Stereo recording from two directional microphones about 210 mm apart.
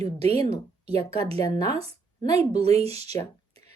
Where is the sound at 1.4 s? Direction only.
20° left (ahead or behind).